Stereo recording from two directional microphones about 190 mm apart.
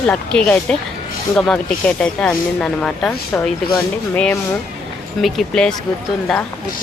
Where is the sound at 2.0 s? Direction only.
5° left (ahead or behind).